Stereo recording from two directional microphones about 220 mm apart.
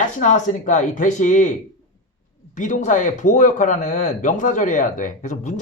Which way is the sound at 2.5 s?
35° left (ahead or behind).